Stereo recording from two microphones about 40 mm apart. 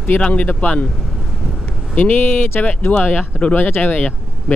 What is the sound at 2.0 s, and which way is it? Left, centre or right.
Speech, left.